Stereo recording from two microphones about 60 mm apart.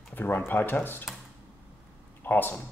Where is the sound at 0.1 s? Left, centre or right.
Left.